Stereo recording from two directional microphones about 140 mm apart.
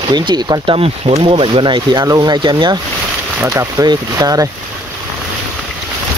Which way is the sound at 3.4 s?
20° right (ahead or behind).